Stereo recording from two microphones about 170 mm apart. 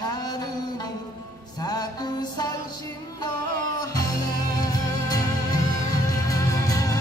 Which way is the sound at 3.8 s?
20° left (ahead or behind).